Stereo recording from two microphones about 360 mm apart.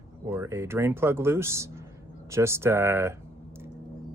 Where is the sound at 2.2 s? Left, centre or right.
Centre.